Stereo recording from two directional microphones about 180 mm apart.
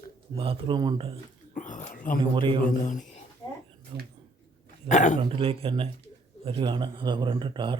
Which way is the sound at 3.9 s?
30° right (ahead or behind).